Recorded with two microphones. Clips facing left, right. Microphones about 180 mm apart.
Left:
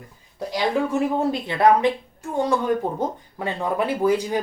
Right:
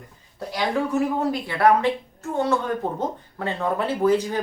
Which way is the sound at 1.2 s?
25° left (ahead or behind).